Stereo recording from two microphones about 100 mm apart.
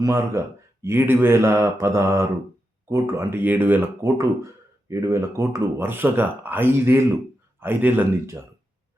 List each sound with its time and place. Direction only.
0.0 s speech: 30° right (ahead or behind)
4.0 s speech: 30° right (ahead or behind)